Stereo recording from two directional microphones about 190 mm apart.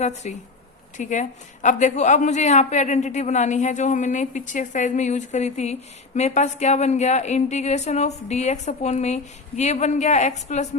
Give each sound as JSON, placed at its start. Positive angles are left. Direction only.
{"t": 0.0, "sound": "a woman's voice", "side_deg": 40}